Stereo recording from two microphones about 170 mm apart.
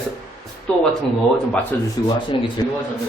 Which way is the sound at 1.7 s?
15° left (ahead or behind).